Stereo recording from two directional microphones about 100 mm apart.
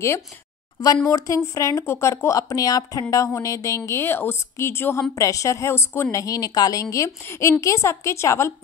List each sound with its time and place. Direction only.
1.0 s a woman's voice: 35° left (ahead or behind)